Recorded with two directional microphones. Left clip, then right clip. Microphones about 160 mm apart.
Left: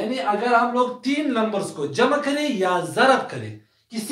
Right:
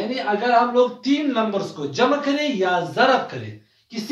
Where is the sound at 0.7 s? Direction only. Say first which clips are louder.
Right 3 dB; 20° left (ahead or behind).